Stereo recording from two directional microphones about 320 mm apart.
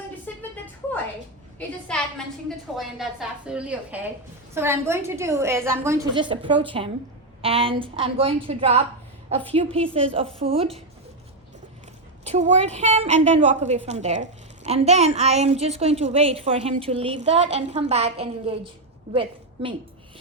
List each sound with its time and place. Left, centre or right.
0.3 s a sound: centre
1.5 s a woman's voice: centre
12.2 s a woman's voice: right